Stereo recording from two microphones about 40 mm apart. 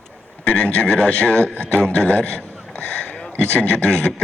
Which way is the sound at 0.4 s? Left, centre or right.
Left.